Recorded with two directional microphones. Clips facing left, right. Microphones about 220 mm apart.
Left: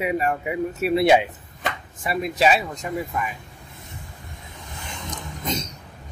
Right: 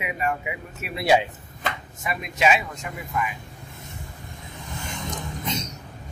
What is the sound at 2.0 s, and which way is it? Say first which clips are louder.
Speech: left 3 dB; 35° left (ahead or behind).